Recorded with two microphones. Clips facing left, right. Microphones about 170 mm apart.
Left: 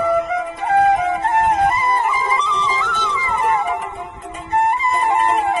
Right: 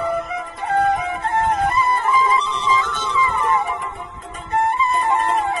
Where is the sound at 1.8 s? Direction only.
55° left (ahead or behind).